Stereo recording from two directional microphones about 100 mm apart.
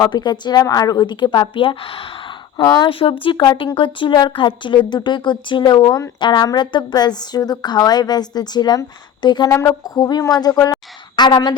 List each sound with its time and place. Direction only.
0.0 s a woman's voice: 45° left (ahead or behind)
9.5 s a woman's voice: 30° left (ahead or behind)